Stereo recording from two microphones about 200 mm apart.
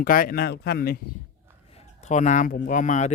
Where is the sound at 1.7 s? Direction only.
35° left (ahead or behind).